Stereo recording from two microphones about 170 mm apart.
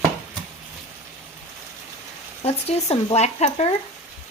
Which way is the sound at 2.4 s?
40° left (ahead or behind).